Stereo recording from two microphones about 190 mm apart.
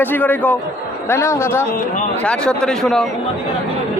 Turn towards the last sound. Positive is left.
turn(degrees=5)  # may be behind; listen again after turning